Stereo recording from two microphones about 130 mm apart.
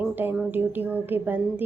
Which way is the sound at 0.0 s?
15° right (ahead or behind).